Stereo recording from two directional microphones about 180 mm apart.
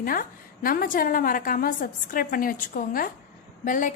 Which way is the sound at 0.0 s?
50° left (ahead or behind).